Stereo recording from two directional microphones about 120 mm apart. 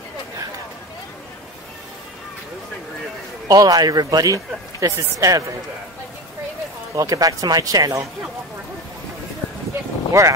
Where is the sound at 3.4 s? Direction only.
30° right (ahead or behind).